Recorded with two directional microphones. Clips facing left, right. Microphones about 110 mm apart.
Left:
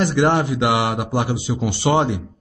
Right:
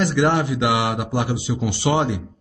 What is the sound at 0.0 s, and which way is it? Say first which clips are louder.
A man's voice: left 1 dB; 35° left (ahead or behind).